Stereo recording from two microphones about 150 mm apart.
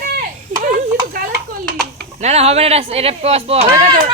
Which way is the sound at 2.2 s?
45° right (ahead or behind).